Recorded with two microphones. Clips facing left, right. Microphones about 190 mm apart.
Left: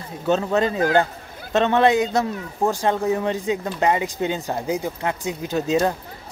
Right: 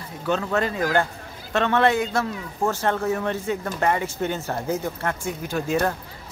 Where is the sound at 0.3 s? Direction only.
20° left (ahead or behind).